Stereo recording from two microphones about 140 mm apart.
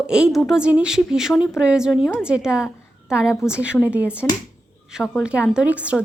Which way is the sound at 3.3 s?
20° left (ahead or behind).